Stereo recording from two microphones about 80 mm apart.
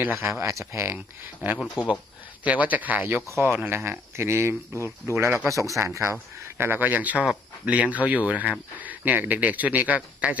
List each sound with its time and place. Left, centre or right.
0.0 s speech: right
1.5 s speech: centre
2.4 s speech: centre; by 6.1 s right
6.6 s speech: right